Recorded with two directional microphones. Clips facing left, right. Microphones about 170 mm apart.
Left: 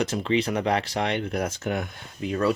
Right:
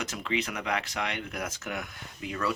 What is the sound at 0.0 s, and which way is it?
Speech, 30° left (ahead or behind).